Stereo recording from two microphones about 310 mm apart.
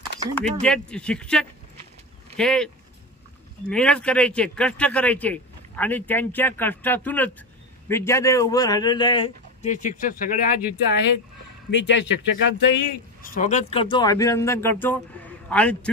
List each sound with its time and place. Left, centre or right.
0.3 s a man's voice: centre